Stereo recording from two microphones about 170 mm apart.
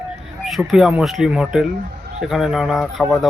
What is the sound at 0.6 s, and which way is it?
Speech, 5° right (ahead or behind).